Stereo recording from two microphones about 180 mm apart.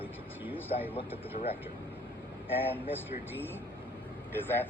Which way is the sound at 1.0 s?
35° left (ahead or behind).